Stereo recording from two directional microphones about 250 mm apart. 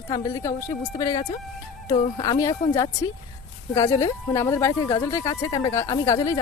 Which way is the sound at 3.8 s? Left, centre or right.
Centre.